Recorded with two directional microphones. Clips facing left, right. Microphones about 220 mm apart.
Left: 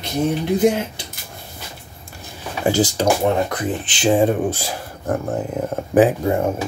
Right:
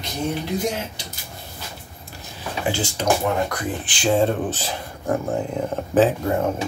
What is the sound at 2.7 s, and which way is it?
Speech, 35° left (ahead or behind).